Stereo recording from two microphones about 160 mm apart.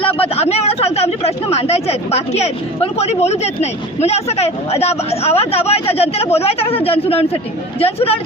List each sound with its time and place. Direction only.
0.2 s speech: 40° left (ahead or behind)